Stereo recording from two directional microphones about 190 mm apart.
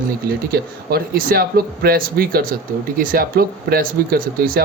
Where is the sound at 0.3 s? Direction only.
55° right (ahead or behind).